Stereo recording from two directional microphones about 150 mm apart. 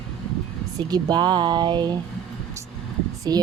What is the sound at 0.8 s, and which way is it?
Speech, 25° right (ahead or behind).